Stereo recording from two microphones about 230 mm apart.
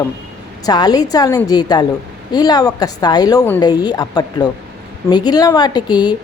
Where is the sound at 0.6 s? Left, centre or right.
Centre.